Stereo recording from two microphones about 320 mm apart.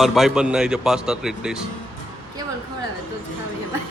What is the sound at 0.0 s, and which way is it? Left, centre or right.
A man's voice, centre.